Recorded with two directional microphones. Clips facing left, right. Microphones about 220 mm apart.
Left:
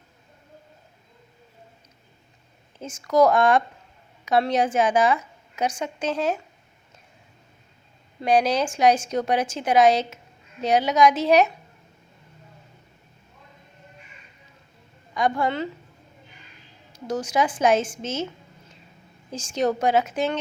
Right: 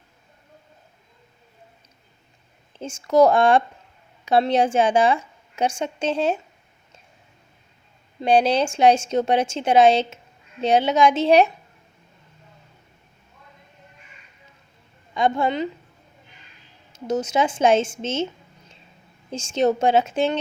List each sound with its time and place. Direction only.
2.7 s a woman's voice: 30° right (ahead or behind)
8.2 s a woman's voice: 30° right (ahead or behind)
15.1 s a woman's voice: 25° right (ahead or behind)
16.9 s a woman's voice: 20° right (ahead or behind)
19.3 s a woman's voice: 25° right (ahead or behind)